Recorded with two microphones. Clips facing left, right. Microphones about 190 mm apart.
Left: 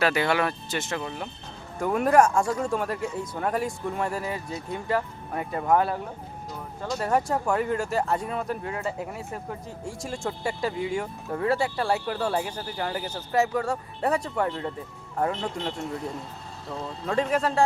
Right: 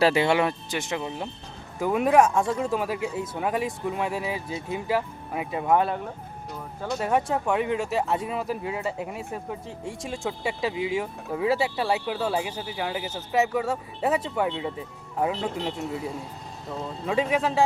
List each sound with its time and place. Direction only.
0.0 s speech: 25° right (ahead or behind)
1.8 s speech: centre (ahead or behind)
7.1 s speech: centre (ahead or behind)